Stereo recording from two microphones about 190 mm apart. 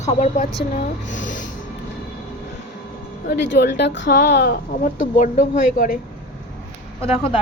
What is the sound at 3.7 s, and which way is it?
Speech, 70° left (ahead or behind).